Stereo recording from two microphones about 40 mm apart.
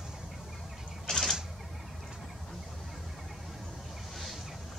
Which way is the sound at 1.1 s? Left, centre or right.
Centre.